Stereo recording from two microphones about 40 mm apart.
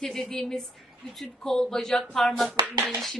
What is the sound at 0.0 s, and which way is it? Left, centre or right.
A woman's voice, centre.